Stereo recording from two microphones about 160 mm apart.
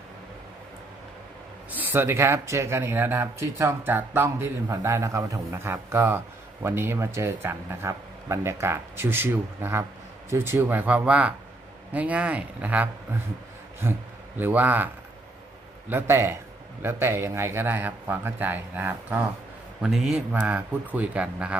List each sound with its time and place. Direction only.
1.7 s speech: 10° right (ahead or behind)
15.9 s speech: 15° right (ahead or behind)